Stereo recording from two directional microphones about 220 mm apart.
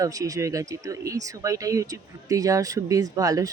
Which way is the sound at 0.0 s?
15° right (ahead or behind).